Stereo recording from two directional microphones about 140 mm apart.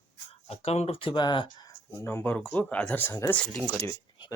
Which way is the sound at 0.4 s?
45° left (ahead or behind).